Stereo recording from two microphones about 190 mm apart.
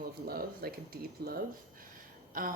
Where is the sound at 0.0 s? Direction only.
50° right (ahead or behind).